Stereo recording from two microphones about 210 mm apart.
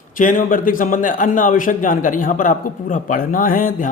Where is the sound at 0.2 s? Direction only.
40° left (ahead or behind).